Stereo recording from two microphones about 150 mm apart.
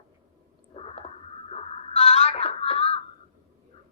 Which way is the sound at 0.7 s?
40° left (ahead or behind).